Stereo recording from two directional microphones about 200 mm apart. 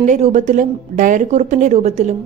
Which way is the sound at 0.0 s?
35° right (ahead or behind).